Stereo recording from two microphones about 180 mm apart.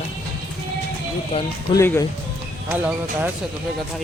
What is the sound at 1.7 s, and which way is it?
Speech, 15° left (ahead or behind).